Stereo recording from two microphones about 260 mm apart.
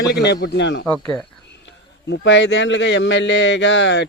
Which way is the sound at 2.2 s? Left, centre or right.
Left.